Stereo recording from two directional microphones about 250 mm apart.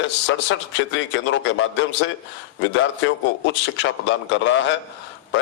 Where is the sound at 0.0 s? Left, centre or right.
Left.